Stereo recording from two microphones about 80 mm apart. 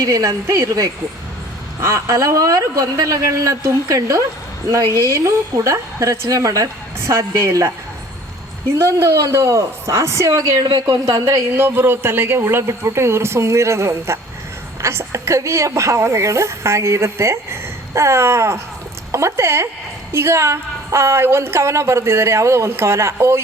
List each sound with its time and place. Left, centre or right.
0.0 s a woman's voice: right
8.8 s a woman's voice: right
11.5 s a woman's voice: right